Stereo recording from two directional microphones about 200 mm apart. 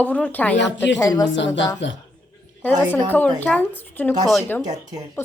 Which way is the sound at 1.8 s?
65° left (ahead or behind).